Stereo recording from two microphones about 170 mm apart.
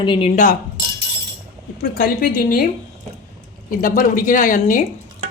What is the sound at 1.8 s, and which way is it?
Speech, 60° left (ahead or behind).